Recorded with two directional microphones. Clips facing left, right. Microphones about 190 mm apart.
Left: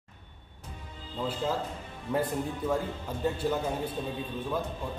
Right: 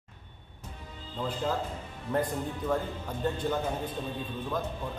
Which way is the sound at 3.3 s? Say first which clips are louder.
Left 1 dB; 10° left (ahead or behind).